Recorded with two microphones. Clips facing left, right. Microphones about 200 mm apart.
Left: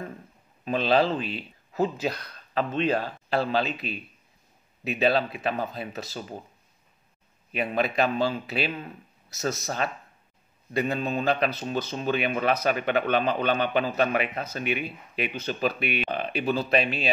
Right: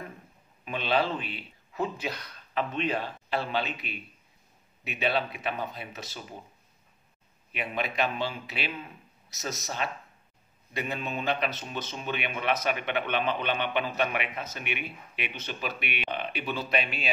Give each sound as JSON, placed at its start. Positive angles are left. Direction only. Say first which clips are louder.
{"t": 0.7, "sound": "a man's voice", "louder": "left 5 dB", "side_deg": 40}
{"t": 4.8, "sound": "a man's voice", "louder": "left 5 dB", "side_deg": 35}
{"t": 7.5, "sound": "a man's voice", "louder": "left 6 dB", "side_deg": 40}